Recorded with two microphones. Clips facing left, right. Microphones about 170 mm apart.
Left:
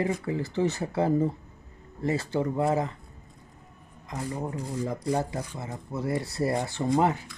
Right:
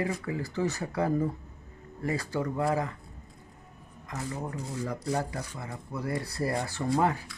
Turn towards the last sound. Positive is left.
turn(degrees=20)  # may be behind; listen again after turning